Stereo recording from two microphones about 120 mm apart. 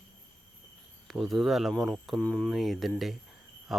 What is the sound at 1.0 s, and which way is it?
Speech, centre (ahead or behind).